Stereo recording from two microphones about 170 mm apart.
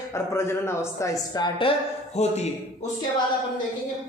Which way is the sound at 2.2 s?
40° left (ahead or behind).